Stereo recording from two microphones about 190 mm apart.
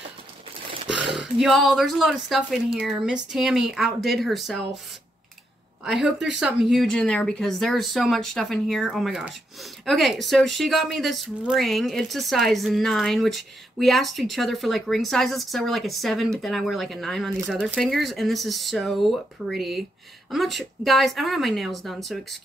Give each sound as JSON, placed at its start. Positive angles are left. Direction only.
{"t": 0.8, "sound": "speech", "side_deg": 0}
{"t": 5.9, "sound": "speech", "side_deg": 0}